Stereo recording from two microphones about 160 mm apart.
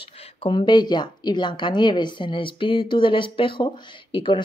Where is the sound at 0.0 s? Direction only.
40° left (ahead or behind).